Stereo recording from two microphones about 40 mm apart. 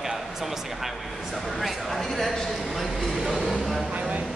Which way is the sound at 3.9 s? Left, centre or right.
Right.